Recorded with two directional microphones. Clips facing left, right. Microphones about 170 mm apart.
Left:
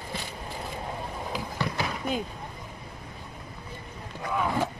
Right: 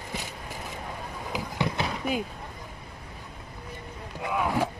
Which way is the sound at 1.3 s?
20° right (ahead or behind).